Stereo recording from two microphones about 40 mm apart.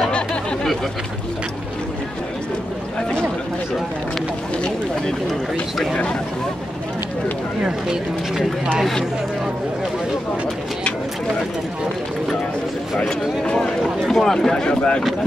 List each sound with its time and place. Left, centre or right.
14.0 s speech: centre